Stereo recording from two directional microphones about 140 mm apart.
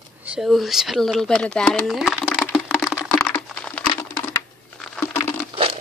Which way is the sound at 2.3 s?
5° left (ahead or behind).